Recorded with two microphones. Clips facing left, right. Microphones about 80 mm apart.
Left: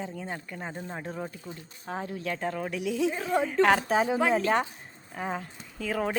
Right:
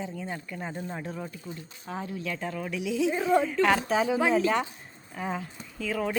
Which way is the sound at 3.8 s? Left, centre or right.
Left.